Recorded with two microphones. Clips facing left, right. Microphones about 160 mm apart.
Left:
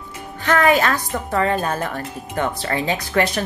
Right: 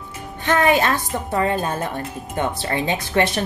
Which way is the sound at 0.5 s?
20° right (ahead or behind).